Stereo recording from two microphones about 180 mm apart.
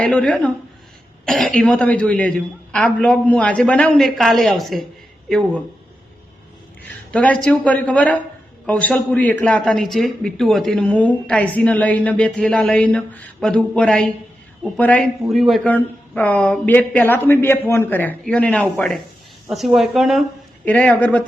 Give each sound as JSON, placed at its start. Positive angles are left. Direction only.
{"t": 0.0, "sound": "a man's voice", "side_deg": 5}
{"t": 6.8, "sound": "a man's voice", "side_deg": 10}